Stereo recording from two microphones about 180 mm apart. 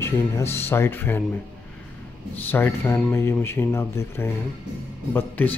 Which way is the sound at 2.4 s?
10° left (ahead or behind).